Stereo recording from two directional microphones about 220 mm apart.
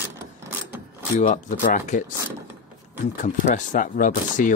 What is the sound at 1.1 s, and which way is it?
Speech, 35° left (ahead or behind).